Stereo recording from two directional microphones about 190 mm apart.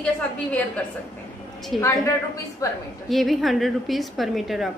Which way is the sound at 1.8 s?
15° left (ahead or behind).